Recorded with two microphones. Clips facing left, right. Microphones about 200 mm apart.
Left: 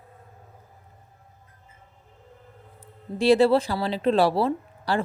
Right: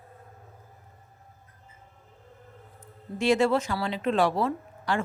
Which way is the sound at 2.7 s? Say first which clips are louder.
Left 4 dB; 35° left (ahead or behind).